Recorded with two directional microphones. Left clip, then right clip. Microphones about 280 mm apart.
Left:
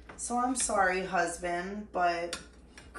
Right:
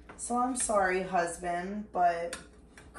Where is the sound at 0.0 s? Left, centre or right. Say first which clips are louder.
Even; centre.